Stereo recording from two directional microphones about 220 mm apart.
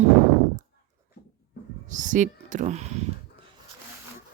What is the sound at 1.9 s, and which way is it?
Speech, 35° right (ahead or behind).